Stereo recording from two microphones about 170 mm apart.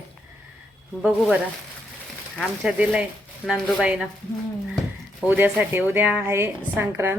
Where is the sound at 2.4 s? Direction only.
5° right (ahead or behind).